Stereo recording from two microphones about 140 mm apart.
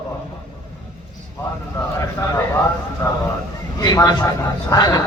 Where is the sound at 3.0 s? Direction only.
20° left (ahead or behind).